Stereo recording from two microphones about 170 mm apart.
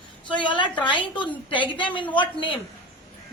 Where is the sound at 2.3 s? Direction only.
30° left (ahead or behind).